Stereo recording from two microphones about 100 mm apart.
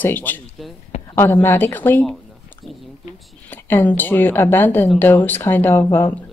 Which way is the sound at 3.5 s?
20° left (ahead or behind).